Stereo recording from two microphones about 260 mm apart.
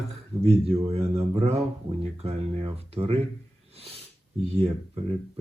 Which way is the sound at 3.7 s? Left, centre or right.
Right.